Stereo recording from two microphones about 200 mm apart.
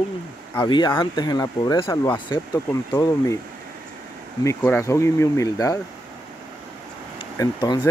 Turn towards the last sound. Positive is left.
turn(degrees=20)  # may be behind; listen again after turning